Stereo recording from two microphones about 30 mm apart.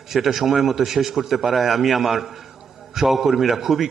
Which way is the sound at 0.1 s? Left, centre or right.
Centre.